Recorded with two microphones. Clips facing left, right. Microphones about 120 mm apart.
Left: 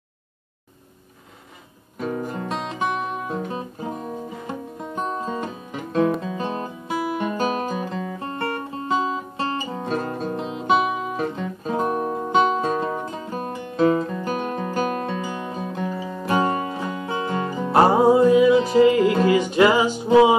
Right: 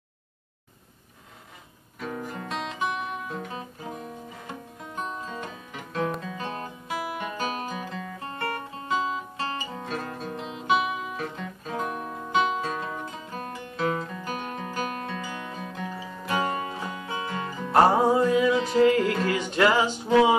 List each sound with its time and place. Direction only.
2.0 s music: 30° left (ahead or behind)
3.3 s guitar: 30° left (ahead or behind)
4.9 s music: 35° left (ahead or behind)
17.7 s music: 10° left (ahead or behind)